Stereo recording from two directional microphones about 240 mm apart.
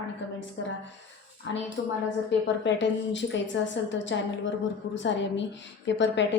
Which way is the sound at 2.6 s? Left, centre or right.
Left.